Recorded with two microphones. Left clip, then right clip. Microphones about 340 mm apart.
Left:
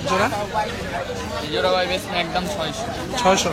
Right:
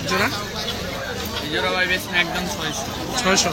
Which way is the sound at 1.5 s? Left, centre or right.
Centre.